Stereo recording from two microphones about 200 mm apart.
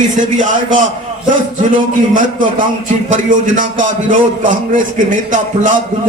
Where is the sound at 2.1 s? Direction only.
40° right (ahead or behind).